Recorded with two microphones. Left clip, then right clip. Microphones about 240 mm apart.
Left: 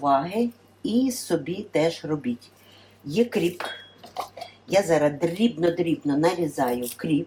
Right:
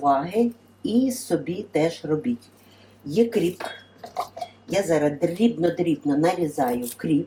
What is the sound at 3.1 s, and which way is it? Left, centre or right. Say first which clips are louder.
Speech: right 2 dB; centre.